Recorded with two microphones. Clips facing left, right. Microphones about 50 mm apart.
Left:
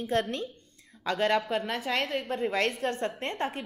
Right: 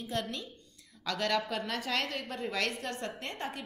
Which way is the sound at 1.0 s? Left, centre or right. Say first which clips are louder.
Left 5 dB; left.